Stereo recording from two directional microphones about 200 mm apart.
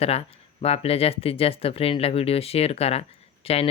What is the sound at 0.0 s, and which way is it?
Speech, 30° left (ahead or behind).